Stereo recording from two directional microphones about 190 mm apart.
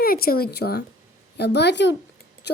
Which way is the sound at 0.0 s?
50° left (ahead or behind).